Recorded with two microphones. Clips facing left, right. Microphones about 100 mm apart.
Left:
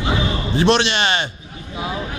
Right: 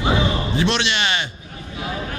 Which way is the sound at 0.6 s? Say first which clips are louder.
Left 6 dB; 40° left (ahead or behind).